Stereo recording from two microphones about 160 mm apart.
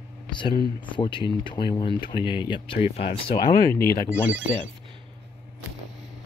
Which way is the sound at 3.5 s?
20° left (ahead or behind).